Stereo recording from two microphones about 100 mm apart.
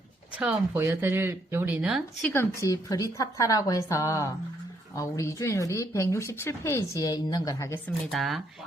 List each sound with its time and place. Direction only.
0.3 s speech: 20° right (ahead or behind)
2.3 s speech: 25° left (ahead or behind)
2.6 s a woman's voice: 35° left (ahead or behind)
7.0 s a woman's voice: 40° left (ahead or behind)
8.1 s speech: centre (ahead or behind)